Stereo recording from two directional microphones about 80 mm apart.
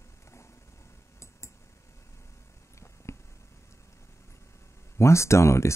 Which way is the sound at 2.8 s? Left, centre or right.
Left.